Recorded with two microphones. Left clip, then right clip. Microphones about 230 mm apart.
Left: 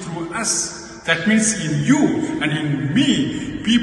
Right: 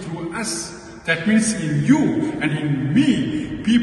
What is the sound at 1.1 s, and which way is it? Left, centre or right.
Speech, centre.